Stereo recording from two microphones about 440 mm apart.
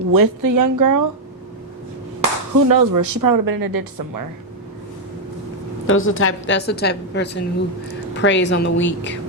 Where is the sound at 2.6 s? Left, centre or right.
Right.